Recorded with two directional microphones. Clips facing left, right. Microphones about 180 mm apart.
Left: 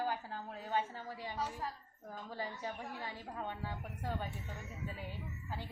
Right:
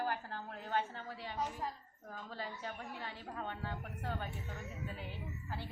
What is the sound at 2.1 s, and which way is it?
A woman's voice, 15° left (ahead or behind).